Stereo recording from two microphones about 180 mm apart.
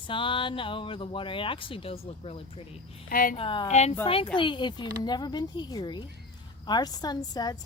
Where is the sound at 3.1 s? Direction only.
50° left (ahead or behind).